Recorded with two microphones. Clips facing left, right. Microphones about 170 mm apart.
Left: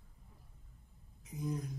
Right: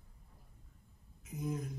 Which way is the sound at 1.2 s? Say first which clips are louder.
Even; centre (ahead or behind).